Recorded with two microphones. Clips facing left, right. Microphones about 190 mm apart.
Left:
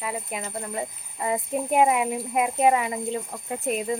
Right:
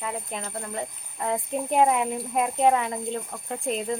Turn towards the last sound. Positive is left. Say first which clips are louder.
# left 1 dB
turn(degrees=5)  # may be behind; listen again after turning